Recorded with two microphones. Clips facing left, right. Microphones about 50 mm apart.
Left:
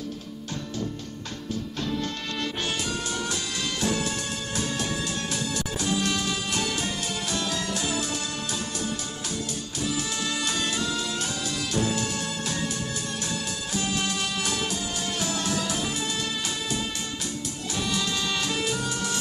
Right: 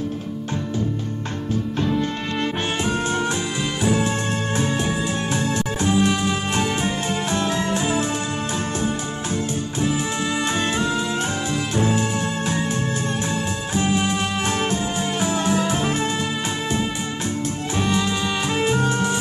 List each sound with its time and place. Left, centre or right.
1.8 s music: right
5.9 s music: right
10.5 s music: right
13.7 s music: right
18.6 s music: right